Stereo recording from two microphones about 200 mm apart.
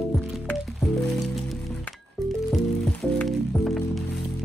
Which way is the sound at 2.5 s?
5° left (ahead or behind).